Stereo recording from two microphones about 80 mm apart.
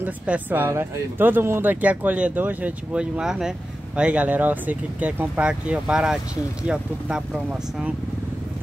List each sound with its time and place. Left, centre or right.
0.0 s speech: right